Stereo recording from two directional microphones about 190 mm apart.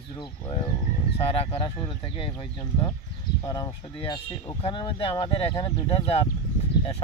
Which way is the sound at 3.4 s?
20° left (ahead or behind).